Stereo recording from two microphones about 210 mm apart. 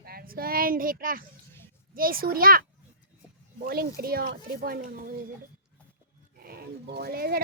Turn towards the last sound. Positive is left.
turn(degrees=-45)  # may be behind; listen again after turning